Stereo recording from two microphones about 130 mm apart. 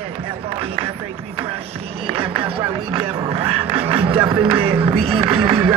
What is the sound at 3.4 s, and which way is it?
Music, 50° right (ahead or behind).